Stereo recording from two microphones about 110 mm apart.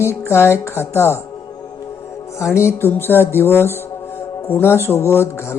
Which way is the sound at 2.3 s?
25° left (ahead or behind).